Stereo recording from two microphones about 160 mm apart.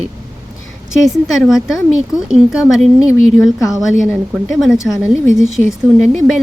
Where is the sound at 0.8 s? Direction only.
Centre (ahead or behind).